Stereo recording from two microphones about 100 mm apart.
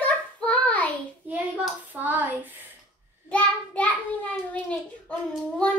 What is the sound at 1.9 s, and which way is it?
Hands, 15° right (ahead or behind).